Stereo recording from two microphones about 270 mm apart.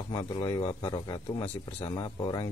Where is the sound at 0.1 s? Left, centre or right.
Centre.